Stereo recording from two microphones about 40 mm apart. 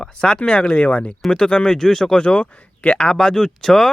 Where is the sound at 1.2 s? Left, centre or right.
Left.